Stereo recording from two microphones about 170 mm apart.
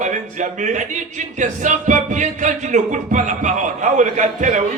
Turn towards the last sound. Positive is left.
turn(degrees=-45)  # may be behind; listen again after turning